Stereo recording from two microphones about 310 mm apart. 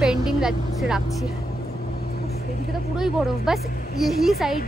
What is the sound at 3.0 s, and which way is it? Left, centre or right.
Speech, centre.